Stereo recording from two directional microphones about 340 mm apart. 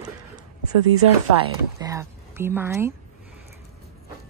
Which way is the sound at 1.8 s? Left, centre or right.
Centre.